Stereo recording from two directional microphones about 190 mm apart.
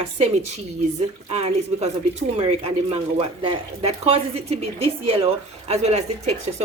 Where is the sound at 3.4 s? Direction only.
30° right (ahead or behind).